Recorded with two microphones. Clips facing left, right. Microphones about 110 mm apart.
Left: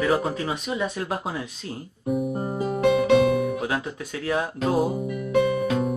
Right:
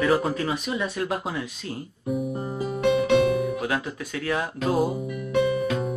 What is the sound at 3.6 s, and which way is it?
Speech, 30° left (ahead or behind).